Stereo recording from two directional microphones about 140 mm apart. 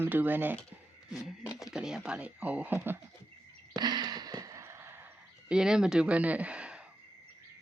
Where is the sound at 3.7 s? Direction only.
30° right (ahead or behind).